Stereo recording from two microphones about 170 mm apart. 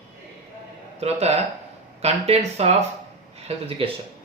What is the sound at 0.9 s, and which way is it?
Speech, 40° right (ahead or behind).